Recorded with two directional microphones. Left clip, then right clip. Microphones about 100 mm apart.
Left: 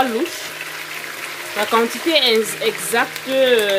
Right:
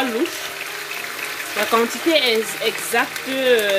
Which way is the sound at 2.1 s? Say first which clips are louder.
Left 4 dB; 40° left (ahead or behind).